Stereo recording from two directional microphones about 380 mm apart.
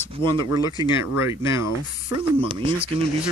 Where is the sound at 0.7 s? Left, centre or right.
Centre.